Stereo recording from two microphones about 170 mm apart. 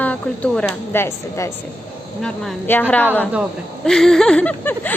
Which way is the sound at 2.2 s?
5° left (ahead or behind).